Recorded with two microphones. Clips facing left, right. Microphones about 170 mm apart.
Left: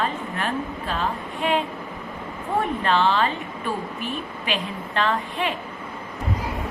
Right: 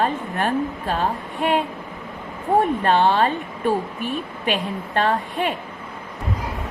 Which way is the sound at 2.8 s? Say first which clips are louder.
Right 3 dB; 55° right (ahead or behind).